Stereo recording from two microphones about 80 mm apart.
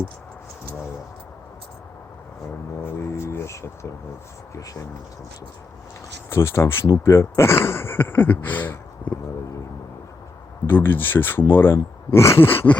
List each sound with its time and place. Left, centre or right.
3.0 s speech: left
4.5 s speech: left
6.3 s speech: left
10.7 s speech: left